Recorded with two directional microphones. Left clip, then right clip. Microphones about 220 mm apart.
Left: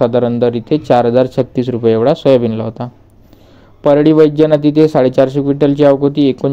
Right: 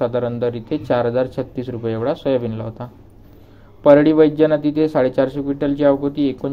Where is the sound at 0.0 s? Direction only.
45° left (ahead or behind).